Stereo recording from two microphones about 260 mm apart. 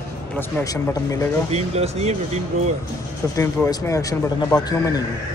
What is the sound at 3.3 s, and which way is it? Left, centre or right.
Speech, centre.